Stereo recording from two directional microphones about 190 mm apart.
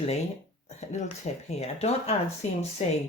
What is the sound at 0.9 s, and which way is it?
Speech, 35° left (ahead or behind).